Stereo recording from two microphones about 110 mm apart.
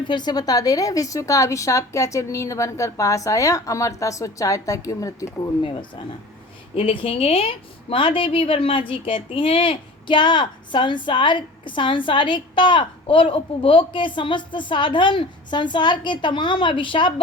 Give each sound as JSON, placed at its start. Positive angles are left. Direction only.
{"t": 0.0, "sound": "a woman's voice", "side_deg": 45}
{"t": 6.7, "sound": "a woman's voice", "side_deg": 55}